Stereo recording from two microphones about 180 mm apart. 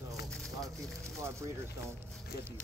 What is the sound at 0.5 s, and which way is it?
Speech, 20° right (ahead or behind).